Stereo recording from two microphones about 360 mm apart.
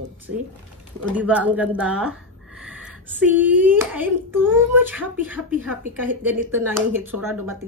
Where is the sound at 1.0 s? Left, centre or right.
Centre.